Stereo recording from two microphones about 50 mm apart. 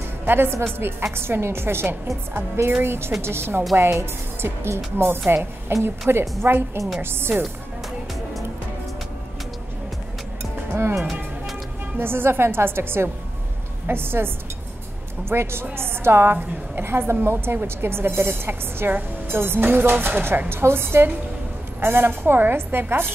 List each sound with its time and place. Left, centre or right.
0.2 s a woman's voice: right
3.7 s a woman's voice: right
10.4 s music: right
12.0 s a woman's voice: right
20.4 s a woman's voice: right